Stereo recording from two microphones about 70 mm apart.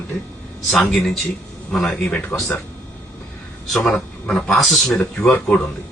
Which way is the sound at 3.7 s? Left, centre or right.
Centre.